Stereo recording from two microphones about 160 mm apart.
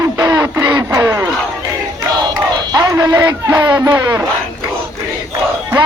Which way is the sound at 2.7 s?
25° right (ahead or behind).